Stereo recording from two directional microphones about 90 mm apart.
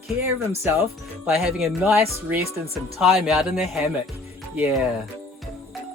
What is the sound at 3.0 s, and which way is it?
Speech, centre (ahead or behind).